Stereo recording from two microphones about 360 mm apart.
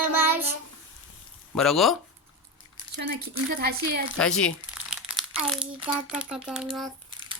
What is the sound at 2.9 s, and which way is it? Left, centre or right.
Speech, right.